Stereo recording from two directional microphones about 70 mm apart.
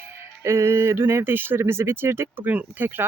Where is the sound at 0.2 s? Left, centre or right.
Right.